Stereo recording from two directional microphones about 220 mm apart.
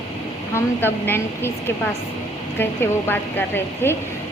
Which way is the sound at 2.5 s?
10° left (ahead or behind).